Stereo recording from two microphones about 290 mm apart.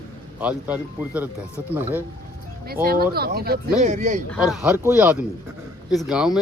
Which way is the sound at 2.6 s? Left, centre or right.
Right.